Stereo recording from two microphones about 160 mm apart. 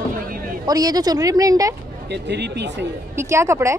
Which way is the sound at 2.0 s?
90° right.